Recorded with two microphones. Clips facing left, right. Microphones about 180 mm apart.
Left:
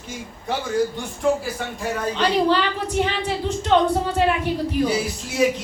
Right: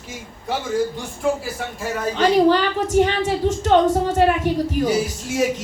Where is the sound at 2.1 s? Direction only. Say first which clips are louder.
Right 5 dB; 45° right (ahead or behind).